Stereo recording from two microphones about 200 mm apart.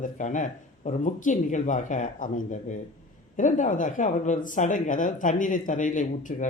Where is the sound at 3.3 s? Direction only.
40° left (ahead or behind).